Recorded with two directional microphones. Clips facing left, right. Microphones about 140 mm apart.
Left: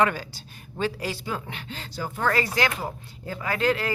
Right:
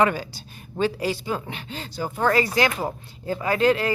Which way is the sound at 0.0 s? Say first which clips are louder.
Right 2 dB; 15° right (ahead or behind).